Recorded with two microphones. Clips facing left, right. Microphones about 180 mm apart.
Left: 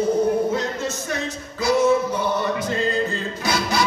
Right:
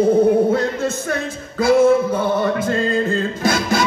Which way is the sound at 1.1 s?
55° right (ahead or behind).